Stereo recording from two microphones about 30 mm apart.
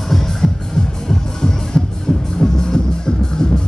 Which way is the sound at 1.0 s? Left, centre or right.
Left.